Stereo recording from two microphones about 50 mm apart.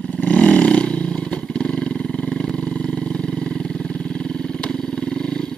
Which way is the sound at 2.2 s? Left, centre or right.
Centre.